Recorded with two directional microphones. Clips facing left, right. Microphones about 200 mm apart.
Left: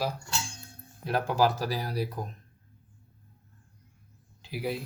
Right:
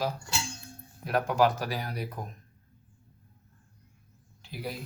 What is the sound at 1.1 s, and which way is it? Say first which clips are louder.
Speech: right 1 dB; 30° left (ahead or behind).